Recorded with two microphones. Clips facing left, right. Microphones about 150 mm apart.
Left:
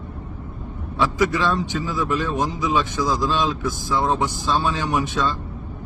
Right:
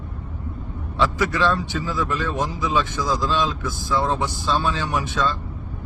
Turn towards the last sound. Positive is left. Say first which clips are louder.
# left 1 dB
turn(degrees=20)  # may be behind; listen again after turning